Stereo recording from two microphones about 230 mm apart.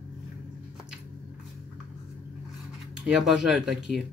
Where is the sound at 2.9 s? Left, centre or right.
Centre.